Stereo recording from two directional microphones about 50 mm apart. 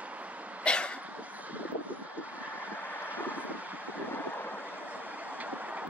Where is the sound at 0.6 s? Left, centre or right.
Left.